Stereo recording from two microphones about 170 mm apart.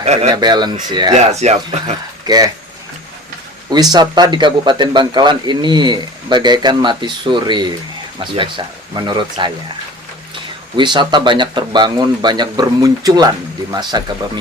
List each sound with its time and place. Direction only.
0.0 s speech: 40° right (ahead or behind)
0.3 s speech: 25° right (ahead or behind)
1.1 s speech: 40° right (ahead or behind)
2.2 s speech: 25° right (ahead or behind)
3.7 s speech: 25° right (ahead or behind)
10.8 s speech: 25° right (ahead or behind)